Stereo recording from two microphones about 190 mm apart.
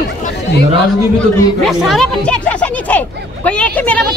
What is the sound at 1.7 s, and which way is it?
Speech, centre (ahead or behind).